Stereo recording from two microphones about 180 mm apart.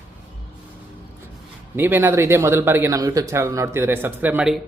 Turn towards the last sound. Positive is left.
turn(degrees=-5)  # may be behind; listen again after turning